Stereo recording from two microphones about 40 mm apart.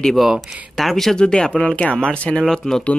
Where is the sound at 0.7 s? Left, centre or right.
Centre.